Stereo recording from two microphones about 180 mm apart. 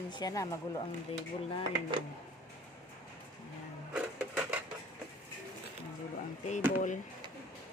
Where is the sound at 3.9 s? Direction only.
5° right (ahead or behind).